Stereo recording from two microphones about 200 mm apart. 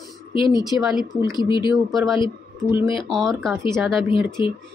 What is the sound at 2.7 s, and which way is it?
Speech, 25° left (ahead or behind).